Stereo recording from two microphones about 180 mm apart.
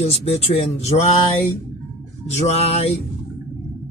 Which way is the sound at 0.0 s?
35° left (ahead or behind).